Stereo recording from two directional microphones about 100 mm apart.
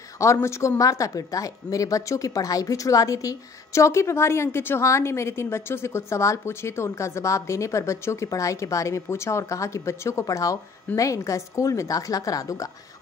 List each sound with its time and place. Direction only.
0.2 s a woman's voice: 30° left (ahead or behind)